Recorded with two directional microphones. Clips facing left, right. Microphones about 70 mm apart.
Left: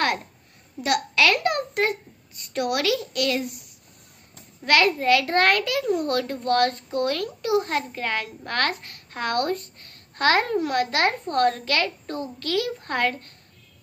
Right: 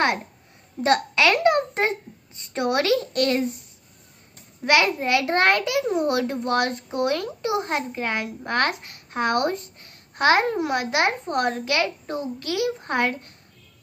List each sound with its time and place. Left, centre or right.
0.8 s a child's voice: right
4.6 s a child's voice: centre